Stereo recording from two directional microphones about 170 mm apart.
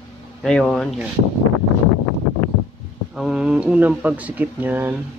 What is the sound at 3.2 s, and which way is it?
Speech, 5° right (ahead or behind).